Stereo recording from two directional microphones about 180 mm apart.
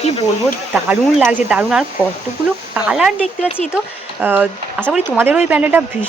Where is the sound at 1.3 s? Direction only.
5° right (ahead or behind).